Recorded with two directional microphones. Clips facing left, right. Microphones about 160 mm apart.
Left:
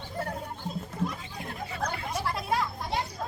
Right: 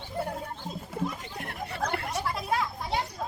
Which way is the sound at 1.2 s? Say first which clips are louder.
Right 1 dB; 70° right (ahead or behind).